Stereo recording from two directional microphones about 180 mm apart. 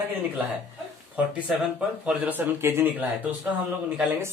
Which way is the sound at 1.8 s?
10° right (ahead or behind).